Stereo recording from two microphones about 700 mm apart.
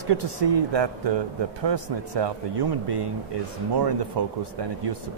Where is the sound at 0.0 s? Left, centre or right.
Right.